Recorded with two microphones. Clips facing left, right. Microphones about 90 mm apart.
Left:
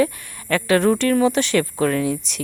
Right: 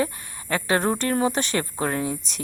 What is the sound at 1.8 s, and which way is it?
Speech, 25° right (ahead or behind).